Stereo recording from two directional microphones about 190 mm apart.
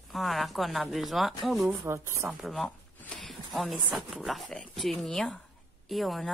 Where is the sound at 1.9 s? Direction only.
15° right (ahead or behind).